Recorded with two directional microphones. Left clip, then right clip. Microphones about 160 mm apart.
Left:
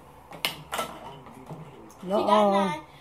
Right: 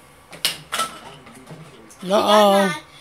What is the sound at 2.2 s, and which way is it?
Speech, 45° right (ahead or behind).